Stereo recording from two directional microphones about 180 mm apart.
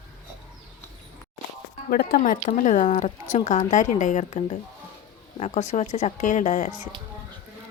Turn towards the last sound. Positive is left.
turn(degrees=45)  # may be behind; listen again after turning